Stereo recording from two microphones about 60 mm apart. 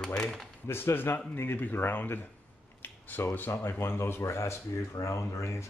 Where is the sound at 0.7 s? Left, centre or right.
Left.